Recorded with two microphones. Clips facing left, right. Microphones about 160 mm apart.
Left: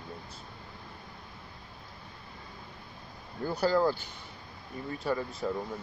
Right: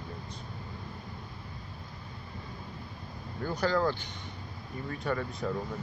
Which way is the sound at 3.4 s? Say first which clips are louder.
Left 2 dB; 10° left (ahead or behind).